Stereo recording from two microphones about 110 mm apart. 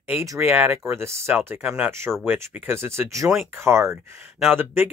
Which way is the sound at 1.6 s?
10° right (ahead or behind).